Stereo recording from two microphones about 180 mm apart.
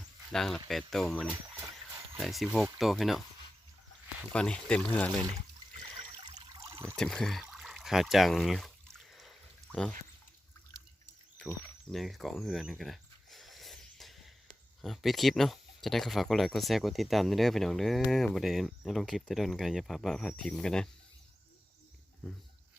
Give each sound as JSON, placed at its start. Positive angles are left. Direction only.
{"t": 0.3, "sound": "speech", "side_deg": 0}
{"t": 4.3, "sound": "speech", "side_deg": 5}
{"t": 6.2, "sound": "water", "side_deg": -15}
{"t": 6.9, "sound": "speech", "side_deg": 5}
{"t": 11.3, "sound": "a sound", "side_deg": 5}
{"t": 14.8, "sound": "speech", "side_deg": 0}